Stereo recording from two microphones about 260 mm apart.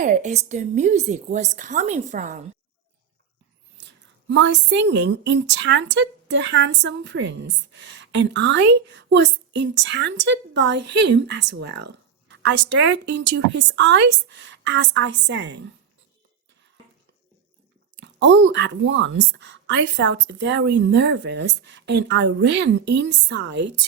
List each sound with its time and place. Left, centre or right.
0.0 s a woman's voice: right
3.8 s speech: right
18.0 s speech: right